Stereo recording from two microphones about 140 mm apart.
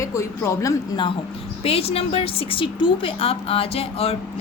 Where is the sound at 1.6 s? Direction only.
45° left (ahead or behind).